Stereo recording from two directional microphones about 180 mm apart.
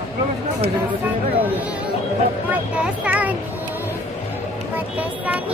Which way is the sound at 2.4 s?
5° right (ahead or behind).